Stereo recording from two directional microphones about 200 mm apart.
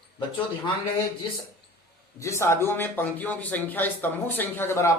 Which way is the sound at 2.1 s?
15° left (ahead or behind).